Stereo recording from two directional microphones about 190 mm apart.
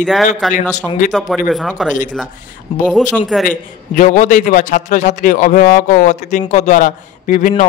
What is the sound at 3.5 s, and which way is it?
A man's voice, 45° left (ahead or behind).